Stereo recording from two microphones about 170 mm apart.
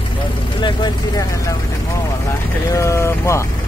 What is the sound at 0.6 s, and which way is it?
Vehicle, 25° left (ahead or behind).